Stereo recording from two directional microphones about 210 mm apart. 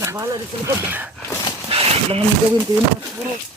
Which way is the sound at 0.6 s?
10° right (ahead or behind).